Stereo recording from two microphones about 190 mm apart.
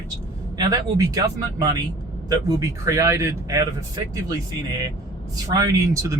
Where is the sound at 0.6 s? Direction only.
20° right (ahead or behind).